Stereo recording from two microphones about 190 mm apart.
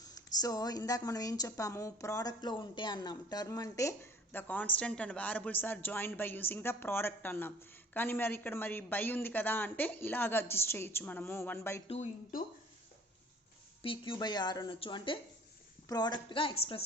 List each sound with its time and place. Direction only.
0.0 s speech: 20° left (ahead or behind)
13.8 s a woman's voice: 25° left (ahead or behind)